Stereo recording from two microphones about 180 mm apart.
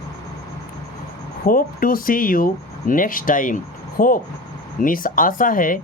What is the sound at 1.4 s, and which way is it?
Speech, 50° left (ahead or behind).